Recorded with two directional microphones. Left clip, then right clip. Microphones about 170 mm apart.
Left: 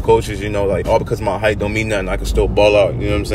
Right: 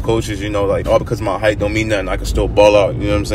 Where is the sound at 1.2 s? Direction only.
10° left (ahead or behind).